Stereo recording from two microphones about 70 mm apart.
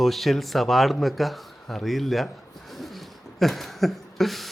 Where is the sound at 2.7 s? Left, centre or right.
Centre.